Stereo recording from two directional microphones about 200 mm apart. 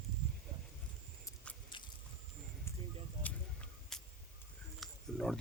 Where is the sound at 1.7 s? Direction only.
25° left (ahead or behind).